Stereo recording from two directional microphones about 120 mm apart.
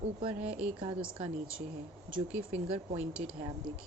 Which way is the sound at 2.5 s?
55° right (ahead or behind).